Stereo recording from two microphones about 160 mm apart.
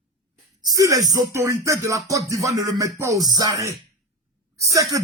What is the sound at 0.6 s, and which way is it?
Music, 25° right (ahead or behind).